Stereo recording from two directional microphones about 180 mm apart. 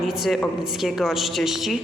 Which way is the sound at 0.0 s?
Centre (ahead or behind).